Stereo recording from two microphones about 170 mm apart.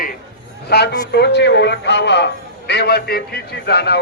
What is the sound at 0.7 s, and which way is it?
A man's voice, 75° left (ahead or behind).